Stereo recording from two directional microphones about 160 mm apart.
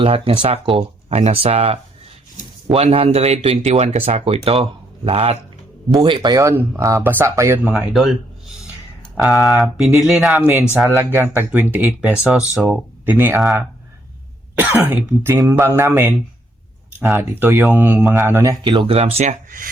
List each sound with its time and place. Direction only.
0.0 s speech: 35° right (ahead or behind); by 7.7 s 15° right (ahead or behind)
7.9 s speech: centre (ahead or behind)
10.8 s speech: 15° right (ahead or behind)
14.6 s speech: 10° right (ahead or behind)
18.6 s speech: 30° right (ahead or behind); by 19.7 s 60° right (ahead or behind)